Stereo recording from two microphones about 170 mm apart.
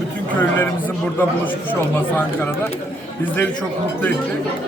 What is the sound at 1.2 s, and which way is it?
Speech, 10° left (ahead or behind).